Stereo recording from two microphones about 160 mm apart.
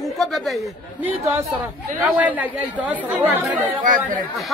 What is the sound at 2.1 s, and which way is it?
Speech, 10° right (ahead or behind).